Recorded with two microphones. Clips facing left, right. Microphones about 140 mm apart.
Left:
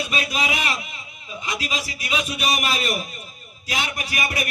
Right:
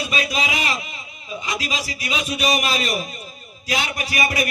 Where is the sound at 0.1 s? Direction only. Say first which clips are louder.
Right 2 dB; 50° left (ahead or behind).